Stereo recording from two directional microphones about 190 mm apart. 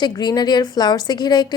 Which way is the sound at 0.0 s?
20° left (ahead or behind).